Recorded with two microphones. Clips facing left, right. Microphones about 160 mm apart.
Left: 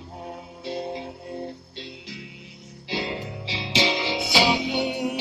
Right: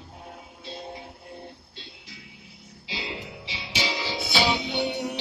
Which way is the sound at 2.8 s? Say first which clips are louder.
Left 7 dB; 50° left (ahead or behind).